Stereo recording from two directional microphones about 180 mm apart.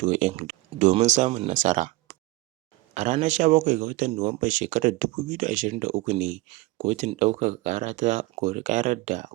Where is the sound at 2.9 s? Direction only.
40° right (ahead or behind).